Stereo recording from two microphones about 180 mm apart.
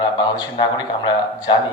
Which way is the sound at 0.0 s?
25° left (ahead or behind).